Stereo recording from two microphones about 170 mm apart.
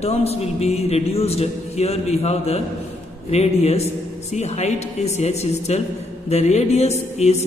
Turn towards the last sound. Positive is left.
turn(degrees=40)  # may be behind; listen again after turning